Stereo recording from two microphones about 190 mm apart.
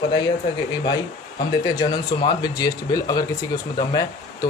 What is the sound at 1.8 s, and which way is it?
Speech, 20° left (ahead or behind).